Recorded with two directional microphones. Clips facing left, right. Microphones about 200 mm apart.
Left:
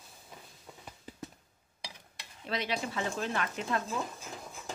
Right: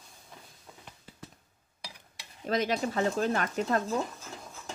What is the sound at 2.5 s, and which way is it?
A woman's voice, 45° right (ahead or behind).